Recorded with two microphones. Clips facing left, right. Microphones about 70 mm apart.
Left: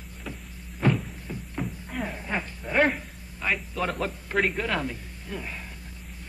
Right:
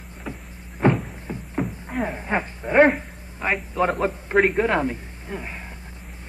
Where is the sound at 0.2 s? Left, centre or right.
Right.